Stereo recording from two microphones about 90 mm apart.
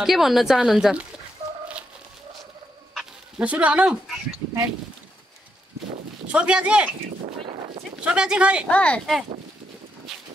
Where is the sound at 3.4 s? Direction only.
15° right (ahead or behind).